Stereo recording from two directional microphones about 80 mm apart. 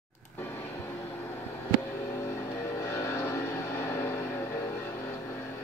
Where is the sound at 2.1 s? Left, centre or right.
Left.